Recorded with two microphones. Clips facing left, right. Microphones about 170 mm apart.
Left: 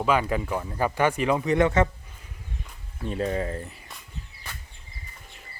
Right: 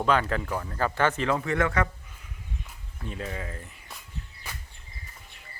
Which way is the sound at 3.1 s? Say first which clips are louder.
Left 8 dB; 35° left (ahead or behind).